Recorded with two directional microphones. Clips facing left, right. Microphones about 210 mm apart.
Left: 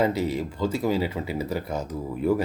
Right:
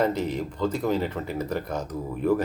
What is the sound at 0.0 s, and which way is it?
Speech, 10° left (ahead or behind).